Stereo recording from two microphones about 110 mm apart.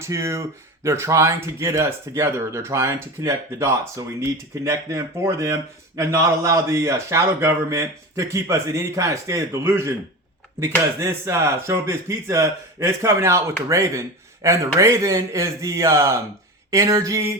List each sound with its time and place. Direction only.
0.0 s speech: 25° right (ahead or behind)